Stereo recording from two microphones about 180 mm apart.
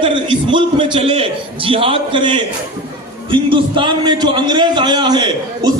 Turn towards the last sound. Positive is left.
turn(degrees=-25)  # may be behind; listen again after turning